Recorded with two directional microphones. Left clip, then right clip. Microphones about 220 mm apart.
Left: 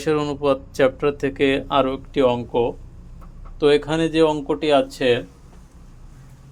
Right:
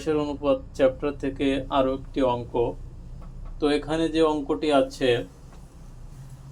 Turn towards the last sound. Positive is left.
turn(degrees=50)  # may be behind; listen again after turning